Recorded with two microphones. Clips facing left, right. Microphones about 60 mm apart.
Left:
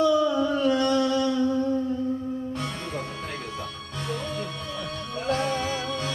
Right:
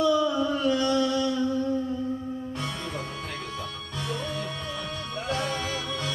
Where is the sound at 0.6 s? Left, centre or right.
Left.